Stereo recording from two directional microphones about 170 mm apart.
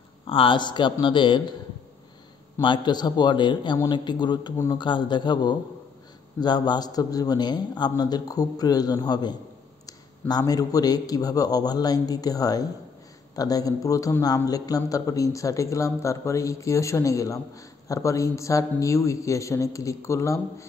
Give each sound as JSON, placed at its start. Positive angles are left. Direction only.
{"t": 0.3, "sound": "a man's voice", "side_deg": 30}
{"t": 2.6, "sound": "a man's voice", "side_deg": 25}